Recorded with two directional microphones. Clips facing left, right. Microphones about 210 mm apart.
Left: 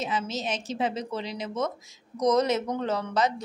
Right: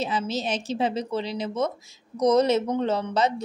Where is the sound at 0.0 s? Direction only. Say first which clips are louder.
Right 3 dB; 30° right (ahead or behind).